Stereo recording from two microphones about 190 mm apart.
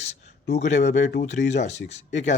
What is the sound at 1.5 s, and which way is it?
Speech, 35° left (ahead or behind).